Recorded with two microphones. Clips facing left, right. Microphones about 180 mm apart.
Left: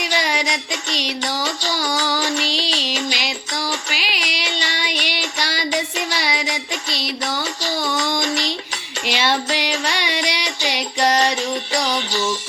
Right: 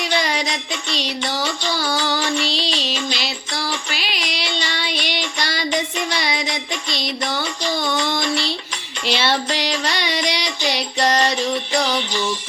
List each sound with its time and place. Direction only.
0.0 s music: 10° left (ahead or behind)
1.7 s music: 15° left (ahead or behind)
12.1 s music: 45° left (ahead or behind)